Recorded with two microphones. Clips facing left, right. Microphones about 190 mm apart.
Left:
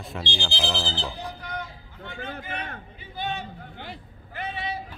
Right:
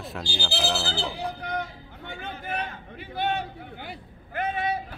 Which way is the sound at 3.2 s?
60° right (ahead or behind).